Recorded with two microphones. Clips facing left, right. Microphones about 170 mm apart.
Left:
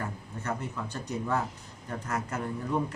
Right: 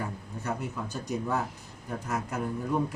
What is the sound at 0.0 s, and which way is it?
A man's voice, 10° right (ahead or behind).